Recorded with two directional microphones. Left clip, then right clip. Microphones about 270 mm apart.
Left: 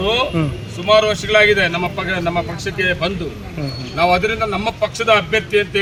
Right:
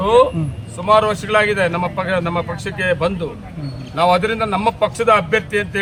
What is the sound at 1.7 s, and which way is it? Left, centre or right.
Speech, centre.